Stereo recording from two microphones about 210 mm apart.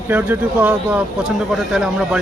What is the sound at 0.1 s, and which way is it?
A man's voice, 10° right (ahead or behind).